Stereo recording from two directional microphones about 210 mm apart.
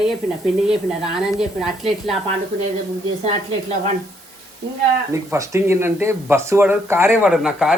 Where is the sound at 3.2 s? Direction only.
35° right (ahead or behind).